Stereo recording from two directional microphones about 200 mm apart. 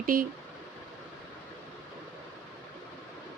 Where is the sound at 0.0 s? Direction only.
45° right (ahead or behind).